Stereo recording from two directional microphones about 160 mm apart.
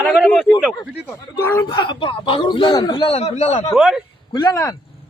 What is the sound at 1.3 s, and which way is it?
Speech, 15° left (ahead or behind).